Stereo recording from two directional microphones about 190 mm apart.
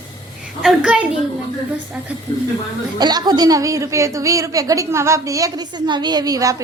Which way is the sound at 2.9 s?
20° right (ahead or behind).